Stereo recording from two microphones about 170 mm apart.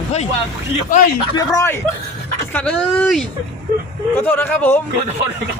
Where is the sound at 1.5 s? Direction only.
15° left (ahead or behind).